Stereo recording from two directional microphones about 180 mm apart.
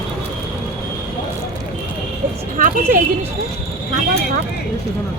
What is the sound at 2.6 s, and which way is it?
Speech, 50° right (ahead or behind).